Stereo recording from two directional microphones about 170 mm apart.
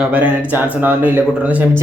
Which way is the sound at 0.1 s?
10° right (ahead or behind).